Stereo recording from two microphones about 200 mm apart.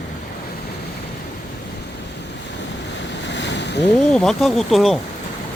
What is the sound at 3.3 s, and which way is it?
Ocean, 60° left (ahead or behind).